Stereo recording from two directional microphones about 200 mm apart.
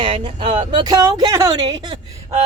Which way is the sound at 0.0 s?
25° right (ahead or behind).